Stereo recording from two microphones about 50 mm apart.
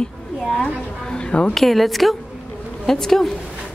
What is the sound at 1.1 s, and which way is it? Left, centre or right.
Speech, centre.